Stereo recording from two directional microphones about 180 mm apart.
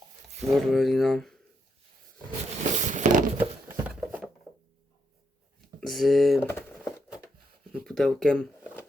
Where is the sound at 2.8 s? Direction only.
45° right (ahead or behind).